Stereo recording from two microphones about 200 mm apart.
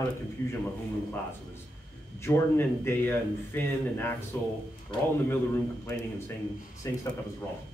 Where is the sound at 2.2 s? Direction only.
10° left (ahead or behind).